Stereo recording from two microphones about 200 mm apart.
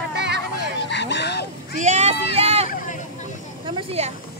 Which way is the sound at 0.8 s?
60° left (ahead or behind).